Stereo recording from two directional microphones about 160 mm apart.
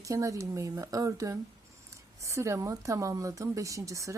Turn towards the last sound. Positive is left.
turn(degrees=-20)  # may be behind; listen again after turning